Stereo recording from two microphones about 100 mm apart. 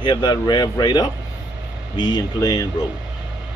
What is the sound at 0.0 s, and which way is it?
Speech, 45° left (ahead or behind).